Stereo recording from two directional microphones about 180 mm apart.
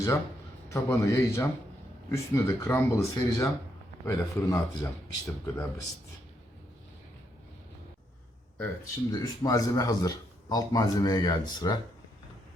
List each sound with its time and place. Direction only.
0.7 s speech: 15° left (ahead or behind)
8.5 s a man's voice: 15° left (ahead or behind)